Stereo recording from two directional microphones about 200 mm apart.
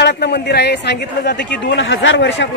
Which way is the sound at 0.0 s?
55° left (ahead or behind).